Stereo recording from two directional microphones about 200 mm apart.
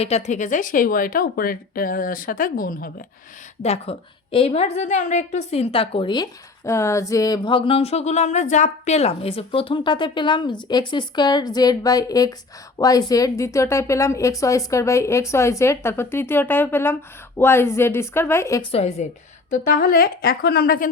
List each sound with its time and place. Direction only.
0.0 s speech: 35° left (ahead or behind)
3.6 s a woman's voice: 30° left (ahead or behind); by 18.6 s 15° left (ahead or behind)
18.7 s a woman's voice: 35° left (ahead or behind)